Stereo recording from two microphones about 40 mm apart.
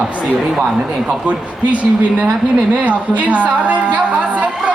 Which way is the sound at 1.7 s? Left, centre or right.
Right.